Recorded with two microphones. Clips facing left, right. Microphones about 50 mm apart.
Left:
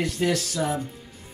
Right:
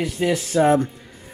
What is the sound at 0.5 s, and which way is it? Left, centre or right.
Speech, right.